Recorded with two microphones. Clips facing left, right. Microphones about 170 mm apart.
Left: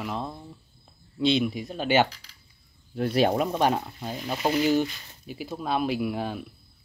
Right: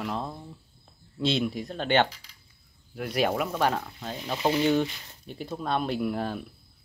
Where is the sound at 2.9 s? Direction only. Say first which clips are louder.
Left 4 dB; 30° left (ahead or behind).